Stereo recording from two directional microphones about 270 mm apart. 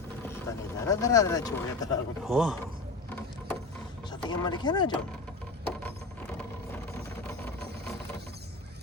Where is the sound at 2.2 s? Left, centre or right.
Centre.